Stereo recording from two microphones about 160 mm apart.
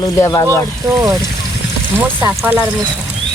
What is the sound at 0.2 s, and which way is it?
Speech, 25° left (ahead or behind).